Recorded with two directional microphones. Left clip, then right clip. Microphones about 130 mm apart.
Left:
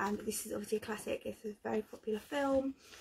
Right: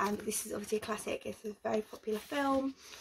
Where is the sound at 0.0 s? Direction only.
30° right (ahead or behind).